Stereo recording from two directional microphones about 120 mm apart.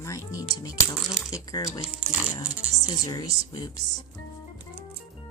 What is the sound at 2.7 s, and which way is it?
Speech, 30° left (ahead or behind).